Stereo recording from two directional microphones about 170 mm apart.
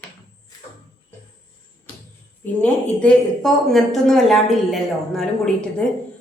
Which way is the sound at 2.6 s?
5° left (ahead or behind).